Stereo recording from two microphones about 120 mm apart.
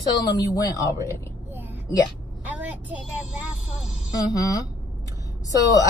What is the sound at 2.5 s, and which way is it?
Vehicle, 15° right (ahead or behind).